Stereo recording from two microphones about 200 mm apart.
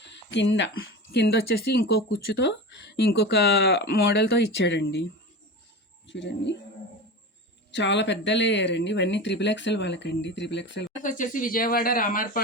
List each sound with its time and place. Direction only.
0.0 s a sound: 60° left (ahead or behind)
0.8 s speech: 55° left (ahead or behind)
6.1 s speech: 60° left (ahead or behind)
7.7 s speech: 60° left (ahead or behind)
11.0 s speech: 40° left (ahead or behind)